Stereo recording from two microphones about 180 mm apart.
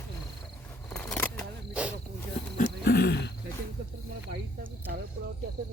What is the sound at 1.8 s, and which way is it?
Cricket, 5° right (ahead or behind).